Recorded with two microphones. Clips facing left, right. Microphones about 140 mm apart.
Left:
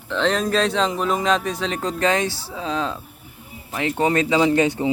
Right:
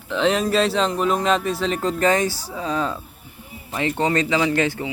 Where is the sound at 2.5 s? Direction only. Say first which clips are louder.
Right 1 dB; centre (ahead or behind).